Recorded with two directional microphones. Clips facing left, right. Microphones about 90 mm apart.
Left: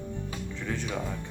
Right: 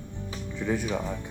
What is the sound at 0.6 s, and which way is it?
Speech, 15° right (ahead or behind).